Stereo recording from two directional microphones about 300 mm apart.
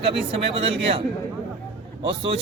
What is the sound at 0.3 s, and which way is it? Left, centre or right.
Speech, centre.